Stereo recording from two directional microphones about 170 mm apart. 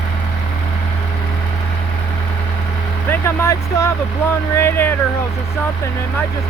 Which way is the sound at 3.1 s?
15° left (ahead or behind).